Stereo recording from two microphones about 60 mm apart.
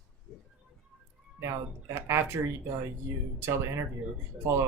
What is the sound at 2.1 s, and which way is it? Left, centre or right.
Speech, right.